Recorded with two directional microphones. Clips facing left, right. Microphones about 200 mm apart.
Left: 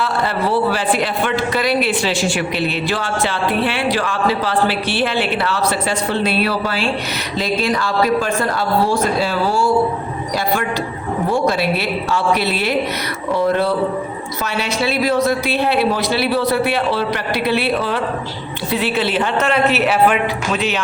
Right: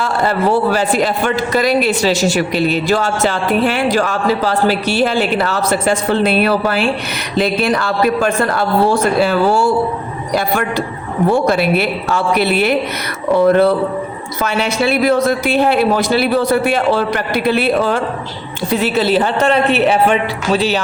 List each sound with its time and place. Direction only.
0.0 s a man's voice: 45° right (ahead or behind)
11.3 s a man's voice: 55° right (ahead or behind); by 20.8 s 35° right (ahead or behind)